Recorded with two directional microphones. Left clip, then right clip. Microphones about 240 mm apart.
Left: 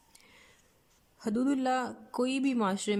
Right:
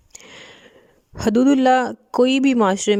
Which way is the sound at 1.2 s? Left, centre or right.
Right.